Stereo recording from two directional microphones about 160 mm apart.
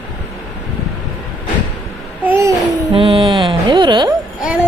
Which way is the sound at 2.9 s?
35° right (ahead or behind).